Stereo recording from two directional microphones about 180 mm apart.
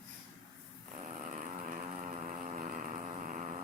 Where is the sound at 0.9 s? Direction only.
40° right (ahead or behind).